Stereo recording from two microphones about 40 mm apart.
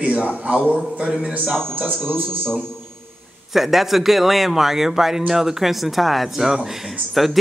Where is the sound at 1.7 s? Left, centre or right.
Right.